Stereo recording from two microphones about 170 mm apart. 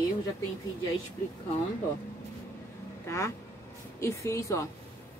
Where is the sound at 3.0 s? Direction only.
15° left (ahead or behind).